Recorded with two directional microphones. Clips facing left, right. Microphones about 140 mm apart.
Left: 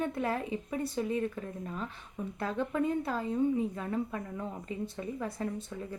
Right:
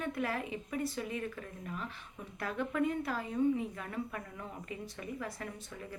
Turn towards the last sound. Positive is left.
turn(degrees=30)  # may be behind; listen again after turning